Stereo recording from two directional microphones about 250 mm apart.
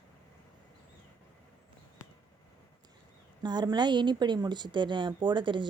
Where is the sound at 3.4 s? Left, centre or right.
Centre.